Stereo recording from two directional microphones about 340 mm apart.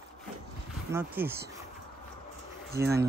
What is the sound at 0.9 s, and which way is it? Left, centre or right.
Speech, centre.